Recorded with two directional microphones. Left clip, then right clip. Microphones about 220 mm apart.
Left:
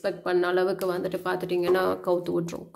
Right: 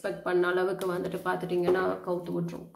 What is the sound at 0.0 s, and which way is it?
Speech, 30° left (ahead or behind).